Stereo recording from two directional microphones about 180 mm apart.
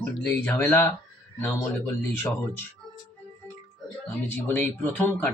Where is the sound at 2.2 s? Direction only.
15° left (ahead or behind).